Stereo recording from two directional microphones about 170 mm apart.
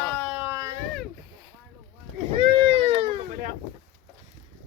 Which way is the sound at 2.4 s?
30° right (ahead or behind).